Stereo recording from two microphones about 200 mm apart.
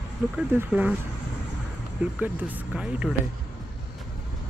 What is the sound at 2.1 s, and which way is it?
Speech, 10° right (ahead or behind).